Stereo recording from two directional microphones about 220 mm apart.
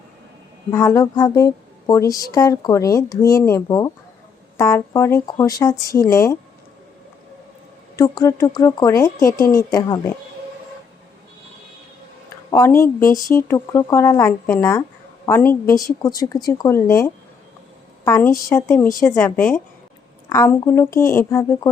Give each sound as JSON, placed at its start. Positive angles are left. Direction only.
{"t": 0.7, "sound": "speech", "side_deg": 15}
{"t": 7.9, "sound": "speech", "side_deg": 15}
{"t": 12.5, "sound": "speech", "side_deg": 15}
{"t": 13.1, "sound": "speech", "side_deg": 40}
{"t": 13.3, "sound": "a woman's voice", "side_deg": 10}